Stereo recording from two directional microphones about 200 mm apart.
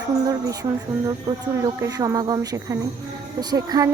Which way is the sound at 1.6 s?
15° right (ahead or behind).